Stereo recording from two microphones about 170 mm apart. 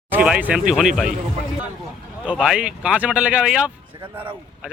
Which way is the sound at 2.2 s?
5° right (ahead or behind).